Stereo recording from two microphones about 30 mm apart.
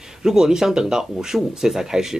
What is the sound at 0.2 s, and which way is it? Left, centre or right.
Speech, centre.